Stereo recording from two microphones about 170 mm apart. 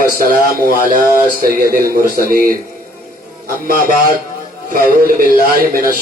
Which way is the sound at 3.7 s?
55° right (ahead or behind).